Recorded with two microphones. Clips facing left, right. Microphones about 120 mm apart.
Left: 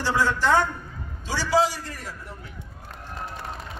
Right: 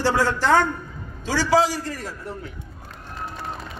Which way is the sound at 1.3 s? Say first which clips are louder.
Right 3 dB; 90° right.